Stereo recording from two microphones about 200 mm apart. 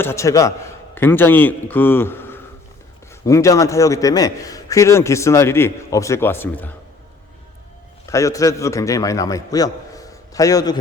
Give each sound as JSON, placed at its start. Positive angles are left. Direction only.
{"t": 0.0, "sound": "a man's voice", "side_deg": 15}
{"t": 8.0, "sound": "a man's voice", "side_deg": 15}